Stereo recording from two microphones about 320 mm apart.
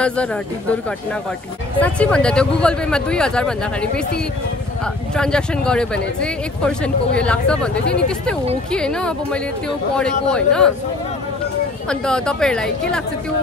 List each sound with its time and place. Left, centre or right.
0.0 s speech: centre
1.8 s speech: centre
5.1 s speech: centre
11.9 s speech: centre